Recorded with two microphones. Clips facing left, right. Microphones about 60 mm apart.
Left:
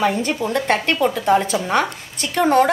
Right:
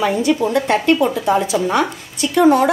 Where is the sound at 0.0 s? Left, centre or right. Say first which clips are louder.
Right 3 dB; left.